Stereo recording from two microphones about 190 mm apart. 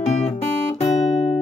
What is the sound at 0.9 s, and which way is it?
Music, 35° left (ahead or behind).